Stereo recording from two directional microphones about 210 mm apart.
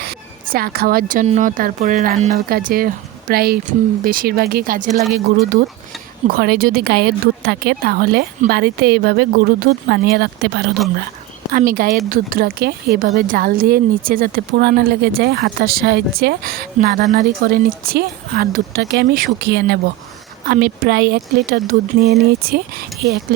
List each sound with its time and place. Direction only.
0.5 s speech: 45° right (ahead or behind)
6.2 s speech: 45° right (ahead or behind)
11.5 s speech: 40° right (ahead or behind)